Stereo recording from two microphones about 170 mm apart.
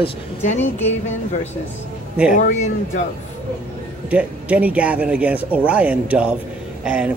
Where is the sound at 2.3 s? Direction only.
50° left (ahead or behind).